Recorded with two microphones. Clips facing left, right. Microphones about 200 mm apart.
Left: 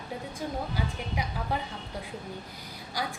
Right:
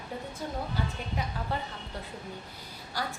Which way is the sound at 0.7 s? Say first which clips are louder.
Left 1 dB; 10° left (ahead or behind).